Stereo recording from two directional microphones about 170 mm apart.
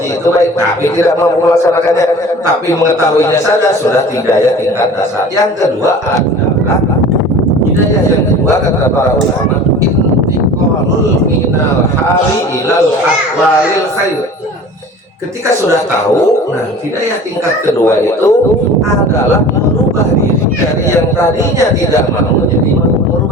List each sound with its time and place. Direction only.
17.7 s speech: 15° left (ahead or behind)